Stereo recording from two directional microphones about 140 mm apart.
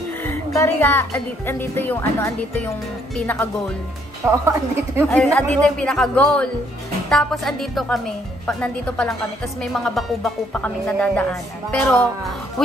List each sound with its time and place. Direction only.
0.2 s a woman's voice: 20° left (ahead or behind)
4.2 s a woman's voice: 20° right (ahead or behind)
5.1 s a woman's voice: 10° left (ahead or behind)